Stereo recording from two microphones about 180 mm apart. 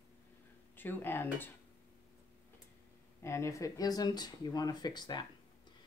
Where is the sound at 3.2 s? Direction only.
15° left (ahead or behind).